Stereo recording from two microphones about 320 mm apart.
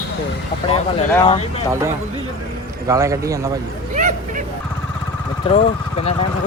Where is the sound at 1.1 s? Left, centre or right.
Centre.